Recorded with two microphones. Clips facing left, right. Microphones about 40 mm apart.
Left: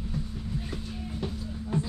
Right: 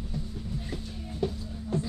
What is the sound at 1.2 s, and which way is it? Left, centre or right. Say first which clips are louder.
Music: right 7 dB; centre.